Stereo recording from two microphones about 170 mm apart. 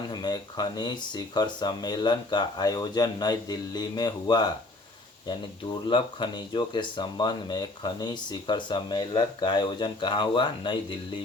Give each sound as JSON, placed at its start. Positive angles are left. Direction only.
{"t": 0.1, "sound": "speech", "side_deg": 25}
{"t": 5.9, "sound": "speech", "side_deg": 30}